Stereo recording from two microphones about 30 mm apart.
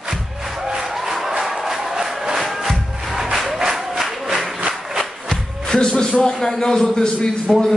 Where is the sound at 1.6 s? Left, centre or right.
Centre.